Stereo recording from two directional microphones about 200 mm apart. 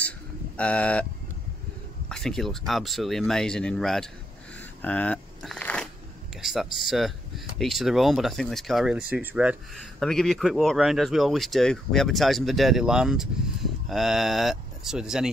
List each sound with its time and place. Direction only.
0.6 s speech: 5° left (ahead or behind)
2.0 s speech: 5° left (ahead or behind)
4.8 s a sound: 5° left (ahead or behind)
6.4 s speech: centre (ahead or behind)